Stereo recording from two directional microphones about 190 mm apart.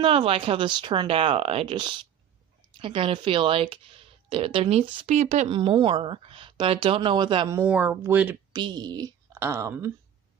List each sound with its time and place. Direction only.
0.0 s speech: 30° right (ahead or behind); by 8.4 s 10° right (ahead or behind)
8.5 s a woman's voice: 20° right (ahead or behind)